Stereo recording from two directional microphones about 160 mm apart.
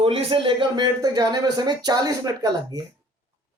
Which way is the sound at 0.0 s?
35° right (ahead or behind).